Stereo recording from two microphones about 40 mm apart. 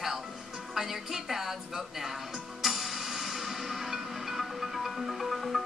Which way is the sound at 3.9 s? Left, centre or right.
Centre.